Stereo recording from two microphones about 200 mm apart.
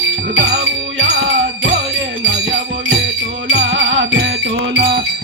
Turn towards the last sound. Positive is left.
turn(degrees=-55)  # may be behind; listen again after turning